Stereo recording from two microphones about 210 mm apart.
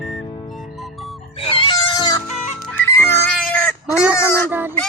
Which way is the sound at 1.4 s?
25° left (ahead or behind).